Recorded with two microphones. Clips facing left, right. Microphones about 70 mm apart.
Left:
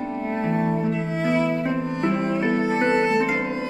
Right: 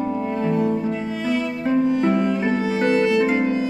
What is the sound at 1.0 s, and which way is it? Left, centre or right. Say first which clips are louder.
Music: left 1 dB; left.